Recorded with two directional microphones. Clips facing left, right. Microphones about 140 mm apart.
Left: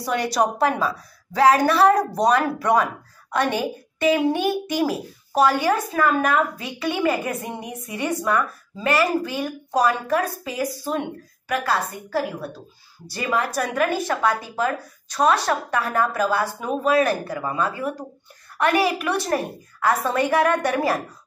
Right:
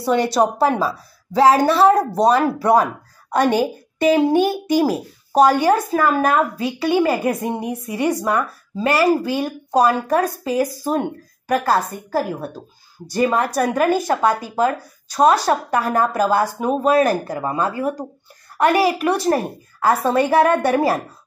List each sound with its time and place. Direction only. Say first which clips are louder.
0.0 s a woman's voice: right 5 dB; 25° right (ahead or behind)